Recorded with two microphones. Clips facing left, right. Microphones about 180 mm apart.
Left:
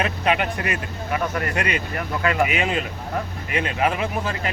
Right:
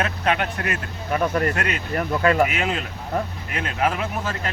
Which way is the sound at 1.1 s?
40° right (ahead or behind).